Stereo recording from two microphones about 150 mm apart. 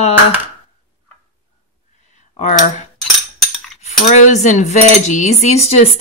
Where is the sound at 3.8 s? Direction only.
50° left (ahead or behind).